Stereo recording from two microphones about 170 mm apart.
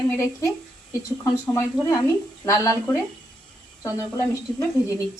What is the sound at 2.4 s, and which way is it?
Speech, 20° left (ahead or behind).